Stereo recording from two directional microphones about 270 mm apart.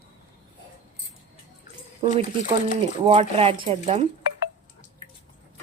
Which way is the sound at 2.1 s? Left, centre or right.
Right.